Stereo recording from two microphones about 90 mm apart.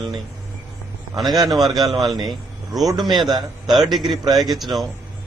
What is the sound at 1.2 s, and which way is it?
A man's voice, 50° right (ahead or behind).